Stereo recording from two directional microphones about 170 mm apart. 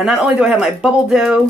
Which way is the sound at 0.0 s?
5° right (ahead or behind).